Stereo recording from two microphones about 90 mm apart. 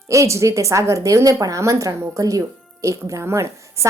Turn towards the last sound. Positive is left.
turn(degrees=-30)  # may be behind; listen again after turning